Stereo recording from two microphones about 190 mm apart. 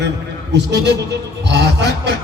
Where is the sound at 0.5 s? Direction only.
65° right (ahead or behind).